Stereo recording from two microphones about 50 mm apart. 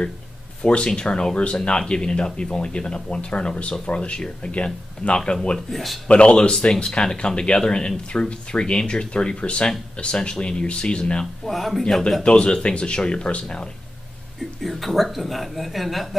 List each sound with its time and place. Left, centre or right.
0.6 s speech: left
5.7 s a man's voice: centre
6.0 s speech: left
11.4 s a man's voice: centre
12.2 s speech: centre
14.6 s a man's voice: centre